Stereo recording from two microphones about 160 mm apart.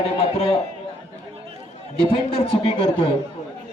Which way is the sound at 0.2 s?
35° left (ahead or behind).